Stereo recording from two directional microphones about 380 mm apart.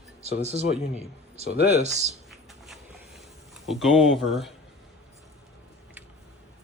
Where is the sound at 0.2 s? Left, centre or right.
Centre.